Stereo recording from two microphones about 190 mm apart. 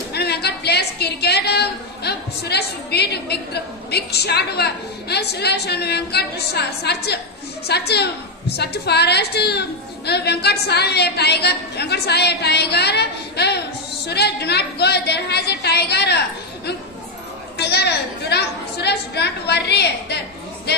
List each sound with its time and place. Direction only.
0.1 s a sound: 60° left (ahead or behind)
3.9 s a woman's voice: 60° left (ahead or behind)
17.6 s a woman's voice: 60° left (ahead or behind)